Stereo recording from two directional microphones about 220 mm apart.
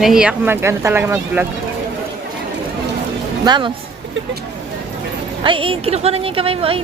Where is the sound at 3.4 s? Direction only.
20° right (ahead or behind).